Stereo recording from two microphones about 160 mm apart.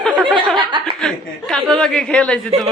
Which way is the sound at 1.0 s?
5° left (ahead or behind).